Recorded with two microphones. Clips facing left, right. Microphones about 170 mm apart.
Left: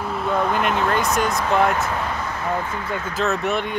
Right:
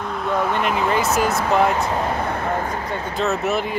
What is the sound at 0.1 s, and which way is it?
Speech, centre (ahead or behind).